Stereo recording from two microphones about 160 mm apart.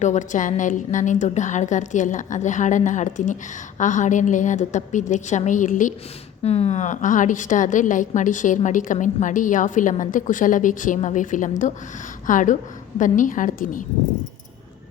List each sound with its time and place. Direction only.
0.0 s a woman's voice: 50° left (ahead or behind)
6.4 s a woman's voice: 40° left (ahead or behind); by 13.8 s 55° left (ahead or behind)